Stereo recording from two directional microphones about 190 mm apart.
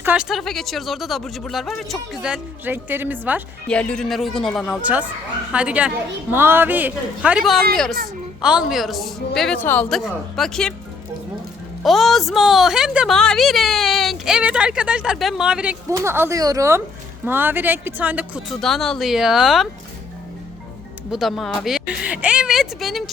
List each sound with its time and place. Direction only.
0.0 s a woman's voice: 5° right (ahead or behind)
3.7 s a woman's voice: 5° left (ahead or behind)
11.8 s a woman's voice: centre (ahead or behind)
21.1 s a woman's voice: centre (ahead or behind)